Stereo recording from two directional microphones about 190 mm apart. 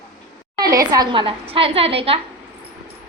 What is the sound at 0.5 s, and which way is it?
A woman's voice, 20° right (ahead or behind).